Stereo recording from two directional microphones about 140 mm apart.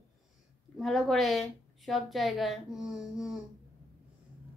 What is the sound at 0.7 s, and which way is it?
A woman's voice, centre (ahead or behind).